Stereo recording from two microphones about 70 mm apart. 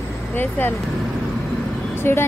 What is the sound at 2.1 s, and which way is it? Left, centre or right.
Speech, left.